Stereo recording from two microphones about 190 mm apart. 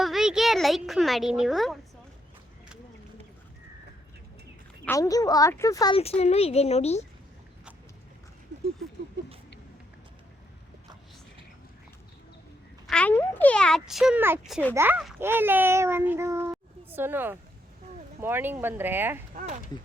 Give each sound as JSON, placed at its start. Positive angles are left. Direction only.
{"t": 0.0, "sound": "speech", "side_deg": 0}
{"t": 4.9, "sound": "a woman's voice", "side_deg": 20}
{"t": 6.0, "sound": "speech", "side_deg": 35}
{"t": 12.9, "sound": "a child's voice", "side_deg": 5}
{"t": 19.3, "sound": "speech", "side_deg": -40}